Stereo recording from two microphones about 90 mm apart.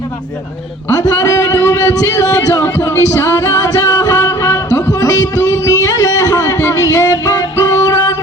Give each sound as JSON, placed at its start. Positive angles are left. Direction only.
{"t": 0.9, "sound": "a man's voice", "side_deg": 40}
{"t": 2.6, "sound": "music", "side_deg": 30}
{"t": 3.2, "sound": "music", "side_deg": 40}
{"t": 4.2, "sound": "music", "side_deg": 25}
{"t": 4.9, "sound": "music", "side_deg": 40}